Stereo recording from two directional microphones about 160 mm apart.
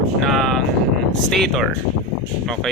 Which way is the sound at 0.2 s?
Centre (ahead or behind).